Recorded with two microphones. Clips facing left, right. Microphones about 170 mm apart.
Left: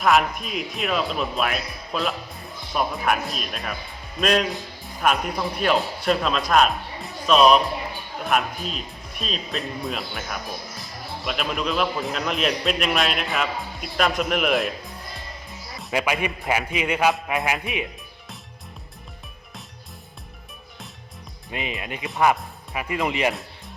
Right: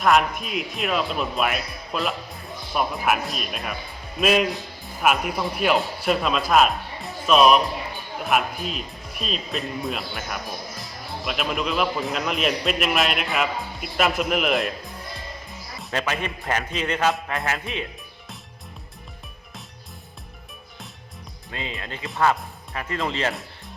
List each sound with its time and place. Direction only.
0.0 s a man's voice: centre (ahead or behind)
15.9 s a man's voice: 10° left (ahead or behind)
21.5 s a man's voice: 15° left (ahead or behind)